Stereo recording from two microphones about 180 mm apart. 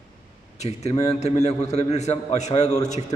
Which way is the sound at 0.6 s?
35° left (ahead or behind).